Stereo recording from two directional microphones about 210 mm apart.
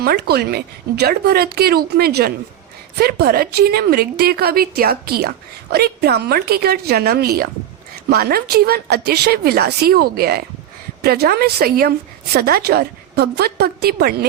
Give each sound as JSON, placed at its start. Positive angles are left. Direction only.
{"t": 0.0, "sound": "speech", "side_deg": -50}